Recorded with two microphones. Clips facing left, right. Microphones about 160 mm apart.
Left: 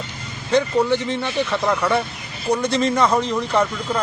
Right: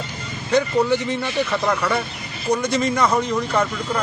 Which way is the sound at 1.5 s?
5° left (ahead or behind).